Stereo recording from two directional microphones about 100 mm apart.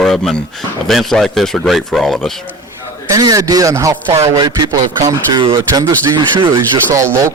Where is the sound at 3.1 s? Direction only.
35° right (ahead or behind).